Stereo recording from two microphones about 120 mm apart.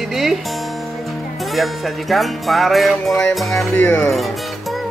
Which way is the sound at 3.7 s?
15° left (ahead or behind).